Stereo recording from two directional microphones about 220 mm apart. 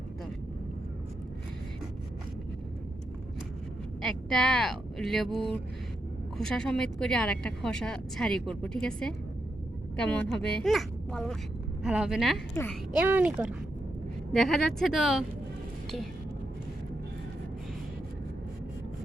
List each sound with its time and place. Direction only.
4.0 s speech: 5° left (ahead or behind)